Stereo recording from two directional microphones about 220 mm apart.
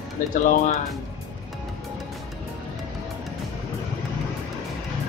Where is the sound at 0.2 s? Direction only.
35° left (ahead or behind).